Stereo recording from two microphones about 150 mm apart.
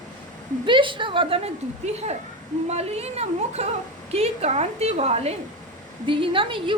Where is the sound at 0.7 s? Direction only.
35° right (ahead or behind).